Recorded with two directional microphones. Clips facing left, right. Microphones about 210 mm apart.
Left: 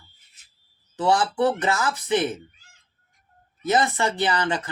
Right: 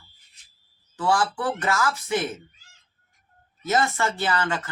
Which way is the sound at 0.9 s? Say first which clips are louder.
Left 3 dB; 20° left (ahead or behind).